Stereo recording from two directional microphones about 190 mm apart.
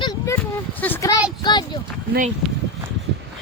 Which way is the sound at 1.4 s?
25° left (ahead or behind).